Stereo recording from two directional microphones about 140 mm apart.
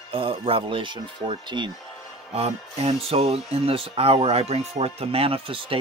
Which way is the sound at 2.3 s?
45° right (ahead or behind).